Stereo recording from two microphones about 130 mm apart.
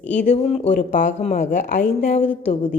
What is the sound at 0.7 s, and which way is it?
Speech, 85° left.